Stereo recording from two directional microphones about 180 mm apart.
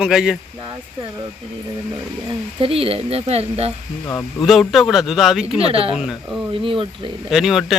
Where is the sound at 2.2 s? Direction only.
30° right (ahead or behind).